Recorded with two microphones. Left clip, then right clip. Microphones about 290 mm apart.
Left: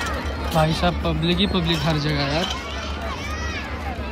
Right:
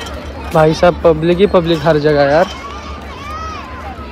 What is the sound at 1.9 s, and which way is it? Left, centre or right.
Speech, centre.